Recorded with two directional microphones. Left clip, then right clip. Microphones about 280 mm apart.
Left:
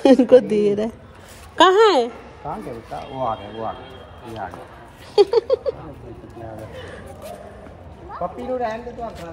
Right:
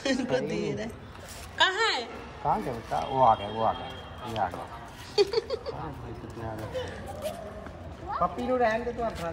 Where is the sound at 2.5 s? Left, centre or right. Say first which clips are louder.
Right 2 dB; right.